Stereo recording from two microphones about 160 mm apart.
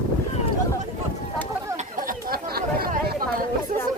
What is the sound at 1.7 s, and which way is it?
Chatter, 55° right (ahead or behind).